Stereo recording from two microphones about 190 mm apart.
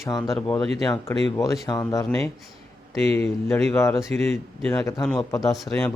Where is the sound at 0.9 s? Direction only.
15° left (ahead or behind).